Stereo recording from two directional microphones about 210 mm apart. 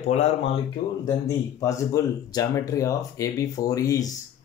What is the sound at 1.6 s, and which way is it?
Speech, 15° left (ahead or behind).